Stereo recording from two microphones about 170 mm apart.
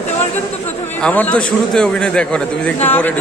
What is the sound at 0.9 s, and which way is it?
A man's voice, 10° left (ahead or behind).